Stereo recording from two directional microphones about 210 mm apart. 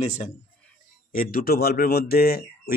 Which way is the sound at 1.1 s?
45° left (ahead or behind).